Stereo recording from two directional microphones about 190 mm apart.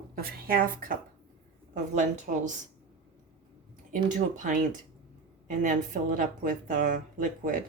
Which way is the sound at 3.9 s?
40° right (ahead or behind).